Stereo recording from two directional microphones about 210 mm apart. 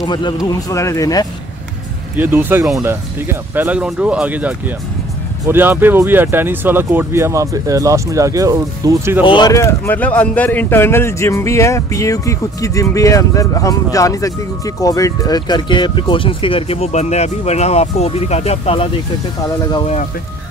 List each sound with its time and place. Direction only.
0.0 s speech: 20° left (ahead or behind)
2.1 s speech: 10° right (ahead or behind)
9.2 s speech: 20° left (ahead or behind)